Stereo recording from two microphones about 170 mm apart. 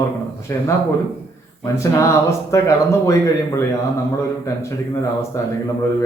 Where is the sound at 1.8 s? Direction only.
15° left (ahead or behind).